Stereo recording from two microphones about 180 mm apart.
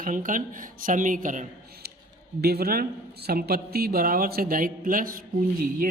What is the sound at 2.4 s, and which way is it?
Speech, 60° right (ahead or behind).